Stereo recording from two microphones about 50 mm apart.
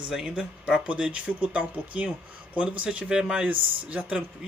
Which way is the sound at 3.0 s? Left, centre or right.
Centre.